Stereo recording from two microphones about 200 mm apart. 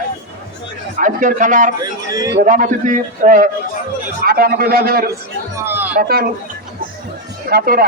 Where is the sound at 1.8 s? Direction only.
20° right (ahead or behind).